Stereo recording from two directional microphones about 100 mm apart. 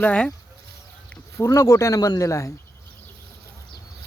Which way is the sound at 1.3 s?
30° left (ahead or behind).